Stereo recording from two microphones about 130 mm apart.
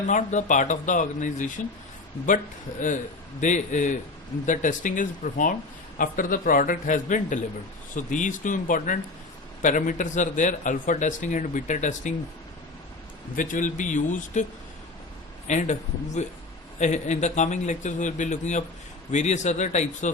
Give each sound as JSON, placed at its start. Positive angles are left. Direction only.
{"t": 0.1, "sound": "speech", "side_deg": 70}
{"t": 3.4, "sound": "speech", "side_deg": 70}
{"t": 13.3, "sound": "speech", "side_deg": 90}
{"t": 15.4, "sound": "a man's voice", "side_deg": 65}